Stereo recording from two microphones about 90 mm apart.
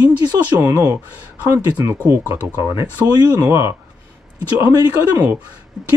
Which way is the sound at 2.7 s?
55° left (ahead or behind).